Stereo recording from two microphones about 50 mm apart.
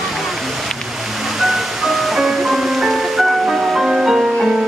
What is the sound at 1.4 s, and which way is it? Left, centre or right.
Music, centre.